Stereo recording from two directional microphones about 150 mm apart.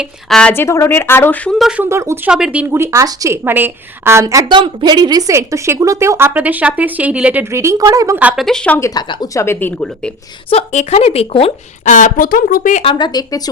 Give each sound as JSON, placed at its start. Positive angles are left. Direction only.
{"t": 0.0, "sound": "a woman's voice", "side_deg": 5}
{"t": 0.5, "sound": "speech", "side_deg": 15}
{"t": 1.5, "sound": "a woman's voice", "side_deg": -5}
{"t": 1.8, "sound": "a woman's voice", "side_deg": -20}
{"t": 2.3, "sound": "a woman's voice", "side_deg": -5}
{"t": 4.4, "sound": "a woman's voice", "side_deg": -30}
{"t": 7.5, "sound": "speech", "side_deg": -20}
{"t": 8.2, "sound": "a woman's voice", "side_deg": -10}
{"t": 8.4, "sound": "speech", "side_deg": 5}
{"t": 8.8, "sound": "a woman's voice", "side_deg": 30}
{"t": 10.5, "sound": "speech", "side_deg": 50}
{"t": 11.9, "sound": "speech", "side_deg": 55}
{"t": 12.7, "sound": "speech", "side_deg": 35}